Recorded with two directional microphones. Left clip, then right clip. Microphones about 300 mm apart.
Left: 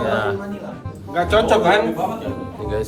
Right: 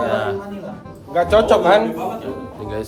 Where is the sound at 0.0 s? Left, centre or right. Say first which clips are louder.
Even; centre.